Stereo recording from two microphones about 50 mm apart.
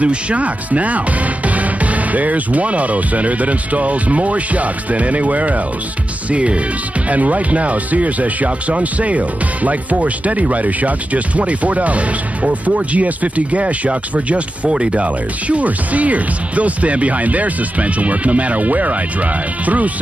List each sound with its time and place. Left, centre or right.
0.0 s speech: right